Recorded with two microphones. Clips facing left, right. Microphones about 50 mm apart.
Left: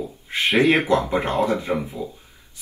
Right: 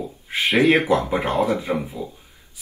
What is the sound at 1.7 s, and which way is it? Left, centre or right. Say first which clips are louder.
Speech: even; right.